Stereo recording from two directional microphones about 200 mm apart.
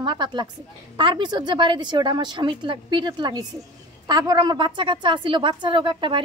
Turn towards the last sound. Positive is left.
turn(degrees=-25)  # may be behind; listen again after turning